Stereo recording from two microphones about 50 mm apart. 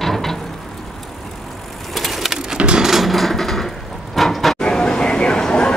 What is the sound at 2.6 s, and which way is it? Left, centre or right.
Sewing machine, centre.